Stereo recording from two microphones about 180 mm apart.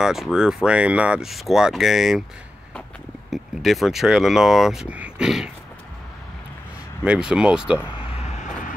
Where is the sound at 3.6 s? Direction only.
Centre (ahead or behind).